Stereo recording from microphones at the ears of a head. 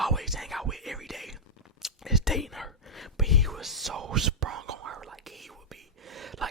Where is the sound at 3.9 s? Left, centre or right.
Right.